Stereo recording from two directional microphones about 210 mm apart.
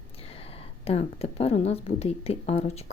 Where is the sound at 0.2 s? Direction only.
25° left (ahead or behind).